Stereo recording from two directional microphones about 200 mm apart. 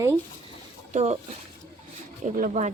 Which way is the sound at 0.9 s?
35° right (ahead or behind).